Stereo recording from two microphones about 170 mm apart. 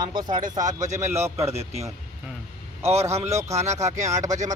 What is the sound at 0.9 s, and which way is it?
Speech, 15° right (ahead or behind).